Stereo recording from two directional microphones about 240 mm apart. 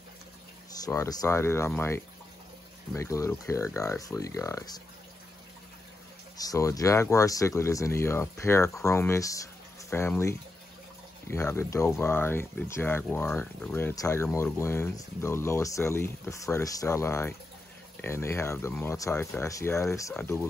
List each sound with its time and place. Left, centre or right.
0.8 s speech: centre
6.3 s speech: centre